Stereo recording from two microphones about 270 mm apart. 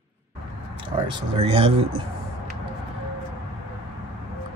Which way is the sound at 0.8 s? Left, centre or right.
Centre.